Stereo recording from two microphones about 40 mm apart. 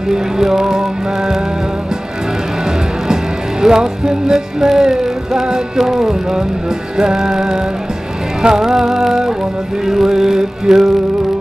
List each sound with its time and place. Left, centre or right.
0.1 s music: centre
3.6 s music: centre